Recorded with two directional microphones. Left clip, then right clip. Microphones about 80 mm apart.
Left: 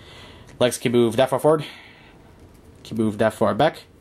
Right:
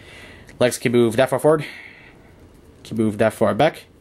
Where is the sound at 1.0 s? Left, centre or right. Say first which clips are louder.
Right 1 dB; centre.